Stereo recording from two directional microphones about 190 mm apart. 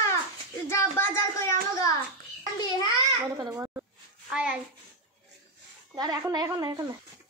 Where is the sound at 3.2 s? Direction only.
20° right (ahead or behind).